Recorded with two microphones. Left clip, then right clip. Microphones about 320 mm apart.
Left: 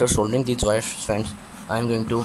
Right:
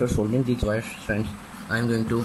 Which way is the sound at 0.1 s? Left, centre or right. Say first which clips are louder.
Left 3 dB; left.